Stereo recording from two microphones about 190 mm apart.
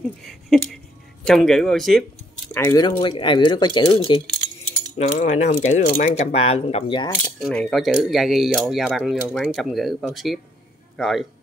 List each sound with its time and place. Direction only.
0.2 s a sound: centre (ahead or behind)
1.2 s speech: centre (ahead or behind)
2.5 s speech: 15° left (ahead or behind)
4.9 s speech: 35° left (ahead or behind)
7.3 s speech: centre (ahead or behind)